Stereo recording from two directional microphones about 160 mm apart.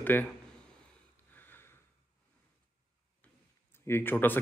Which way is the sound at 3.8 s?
15° left (ahead or behind).